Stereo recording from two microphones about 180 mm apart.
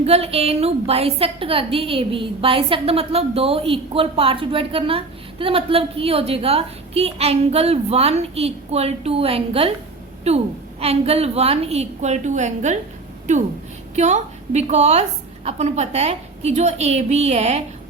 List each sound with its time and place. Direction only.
0.0 s a woman's voice: 35° right (ahead or behind)